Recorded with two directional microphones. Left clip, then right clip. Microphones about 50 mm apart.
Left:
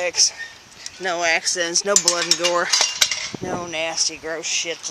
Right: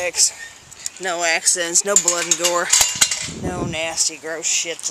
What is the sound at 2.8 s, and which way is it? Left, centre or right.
Cutlery, right.